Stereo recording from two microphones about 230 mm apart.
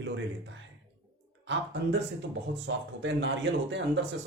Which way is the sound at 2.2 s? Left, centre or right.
Right.